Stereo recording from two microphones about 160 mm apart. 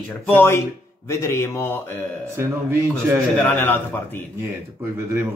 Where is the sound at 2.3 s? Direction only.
15° right (ahead or behind).